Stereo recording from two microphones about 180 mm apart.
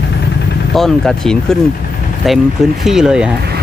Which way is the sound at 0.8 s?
5° left (ahead or behind).